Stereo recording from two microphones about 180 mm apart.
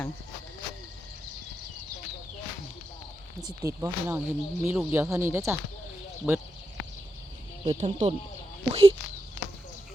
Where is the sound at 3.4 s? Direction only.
15° right (ahead or behind).